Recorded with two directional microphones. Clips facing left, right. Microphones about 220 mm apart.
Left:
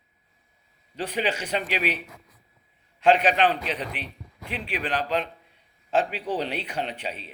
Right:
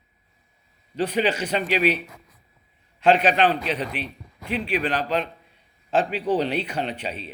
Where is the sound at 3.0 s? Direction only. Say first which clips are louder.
Right 2 dB; 15° left (ahead or behind).